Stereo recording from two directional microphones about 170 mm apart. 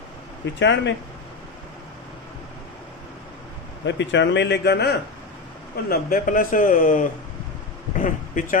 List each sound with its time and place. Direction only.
0.4 s speech: 90° left
3.8 s speech: 90° left
5.9 s a man's voice: 55° left (ahead or behind)